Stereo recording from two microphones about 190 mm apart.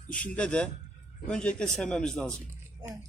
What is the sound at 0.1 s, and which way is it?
A man's voice, 5° left (ahead or behind).